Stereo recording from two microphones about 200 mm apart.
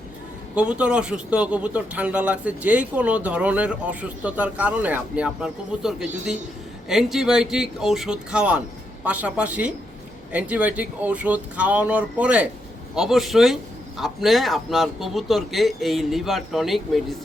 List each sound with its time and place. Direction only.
0.5 s a man's voice: 5° right (ahead or behind)